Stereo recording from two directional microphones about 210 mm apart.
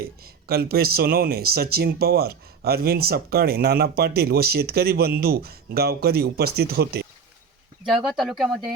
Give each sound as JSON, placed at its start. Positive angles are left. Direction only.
{"t": 0.4, "sound": "speech", "side_deg": -45}
{"t": 7.9, "sound": "speech", "side_deg": 0}